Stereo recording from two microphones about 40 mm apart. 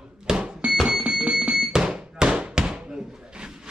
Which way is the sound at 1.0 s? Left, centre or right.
Right.